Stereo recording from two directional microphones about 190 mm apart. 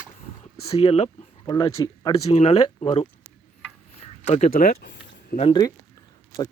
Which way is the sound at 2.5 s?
25° left (ahead or behind).